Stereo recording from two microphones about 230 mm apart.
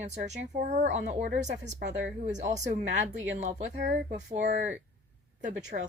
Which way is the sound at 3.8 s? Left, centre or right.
Right.